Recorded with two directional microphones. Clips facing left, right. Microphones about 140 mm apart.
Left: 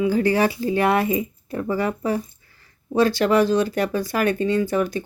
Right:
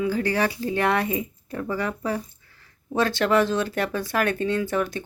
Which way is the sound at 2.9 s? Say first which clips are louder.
Left 3 dB; centre (ahead or behind).